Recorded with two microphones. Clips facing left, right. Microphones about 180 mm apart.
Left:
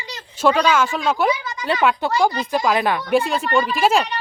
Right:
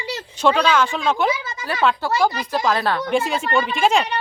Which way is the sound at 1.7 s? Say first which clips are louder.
Left 1 dB; 20° left (ahead or behind).